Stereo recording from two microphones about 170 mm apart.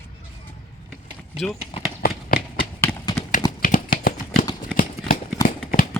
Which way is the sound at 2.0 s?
60° left (ahead or behind).